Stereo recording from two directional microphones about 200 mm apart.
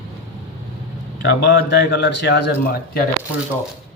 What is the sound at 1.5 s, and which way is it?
A man's voice, 50° left (ahead or behind).